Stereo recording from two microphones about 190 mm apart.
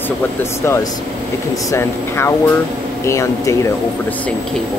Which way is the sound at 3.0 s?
15° left (ahead or behind).